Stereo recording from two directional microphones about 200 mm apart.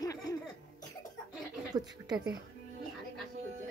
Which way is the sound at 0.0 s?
15° left (ahead or behind).